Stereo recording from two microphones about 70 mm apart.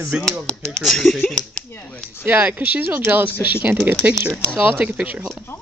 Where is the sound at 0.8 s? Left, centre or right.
Centre.